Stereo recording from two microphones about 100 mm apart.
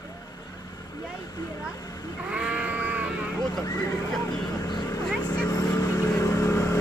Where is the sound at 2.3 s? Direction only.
10° right (ahead or behind).